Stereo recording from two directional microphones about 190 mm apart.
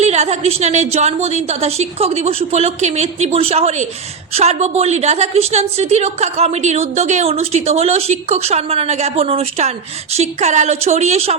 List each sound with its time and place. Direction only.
0.0 s a woman's voice: 35° right (ahead or behind)